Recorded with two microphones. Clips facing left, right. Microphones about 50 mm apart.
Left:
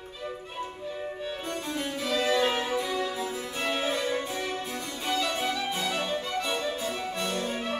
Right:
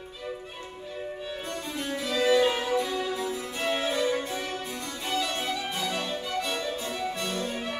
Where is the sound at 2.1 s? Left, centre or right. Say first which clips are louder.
Right 3 dB; centre.